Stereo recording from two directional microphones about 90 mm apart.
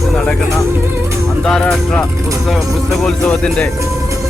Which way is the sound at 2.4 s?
Centre (ahead or behind).